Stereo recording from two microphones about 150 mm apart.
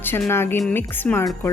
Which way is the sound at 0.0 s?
15° left (ahead or behind).